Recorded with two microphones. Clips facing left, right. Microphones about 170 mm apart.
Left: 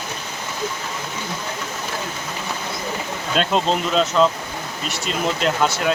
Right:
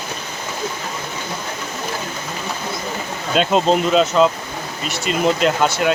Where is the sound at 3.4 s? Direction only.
5° right (ahead or behind).